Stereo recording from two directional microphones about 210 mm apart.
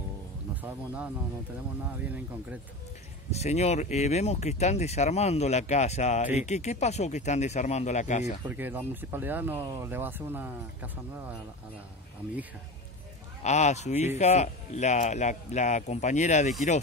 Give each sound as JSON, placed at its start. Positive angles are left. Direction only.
{"t": 0.6, "sound": "speech", "side_deg": -5}
{"t": 3.3, "sound": "speech", "side_deg": 30}
{"t": 8.5, "sound": "speech", "side_deg": -10}
{"t": 13.4, "sound": "speech", "side_deg": 35}